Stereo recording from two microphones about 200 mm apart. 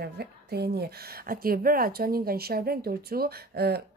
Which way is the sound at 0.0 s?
55° right (ahead or behind).